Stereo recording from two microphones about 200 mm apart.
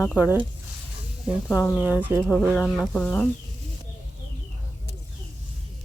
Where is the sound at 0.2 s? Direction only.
10° right (ahead or behind).